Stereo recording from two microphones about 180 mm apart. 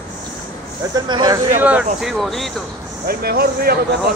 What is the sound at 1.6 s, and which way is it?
Speech, 10° right (ahead or behind).